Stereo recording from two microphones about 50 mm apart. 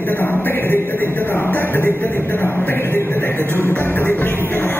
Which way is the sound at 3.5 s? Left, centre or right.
Left.